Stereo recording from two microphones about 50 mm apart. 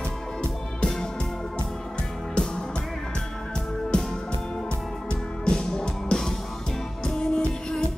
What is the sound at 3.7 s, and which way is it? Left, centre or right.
Music, centre.